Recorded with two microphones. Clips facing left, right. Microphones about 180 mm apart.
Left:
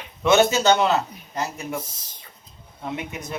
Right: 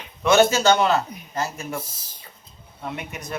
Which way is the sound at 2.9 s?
20° left (ahead or behind).